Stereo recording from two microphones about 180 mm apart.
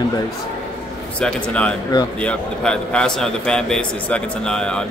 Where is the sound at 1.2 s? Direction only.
5° left (ahead or behind).